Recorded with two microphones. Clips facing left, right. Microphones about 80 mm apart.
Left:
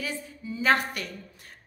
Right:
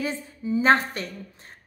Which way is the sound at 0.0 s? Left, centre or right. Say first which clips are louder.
Right 5 dB; right.